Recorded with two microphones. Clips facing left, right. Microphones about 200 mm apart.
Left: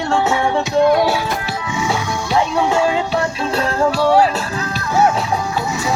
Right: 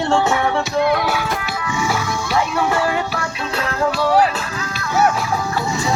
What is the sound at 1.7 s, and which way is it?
Music, 20° left (ahead or behind).